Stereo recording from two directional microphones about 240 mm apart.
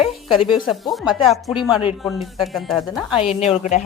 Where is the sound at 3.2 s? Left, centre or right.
Left.